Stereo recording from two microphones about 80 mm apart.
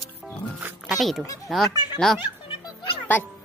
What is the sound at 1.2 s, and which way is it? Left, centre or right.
Speech, left.